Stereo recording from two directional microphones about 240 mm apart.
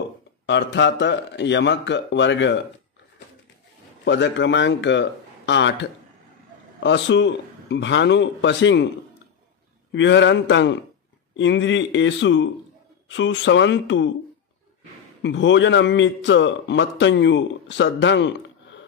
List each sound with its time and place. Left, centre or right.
0.5 s a man's voice: left
4.0 s a man's voice: left
9.9 s a man's voice: left
15.2 s a man's voice: left